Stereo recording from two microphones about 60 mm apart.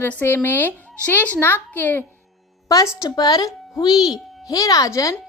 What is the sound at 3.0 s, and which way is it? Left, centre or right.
Speech, left.